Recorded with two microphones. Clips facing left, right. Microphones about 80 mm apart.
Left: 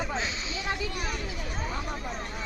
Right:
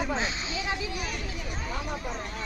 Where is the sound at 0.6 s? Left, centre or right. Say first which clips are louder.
Left 2 dB; left.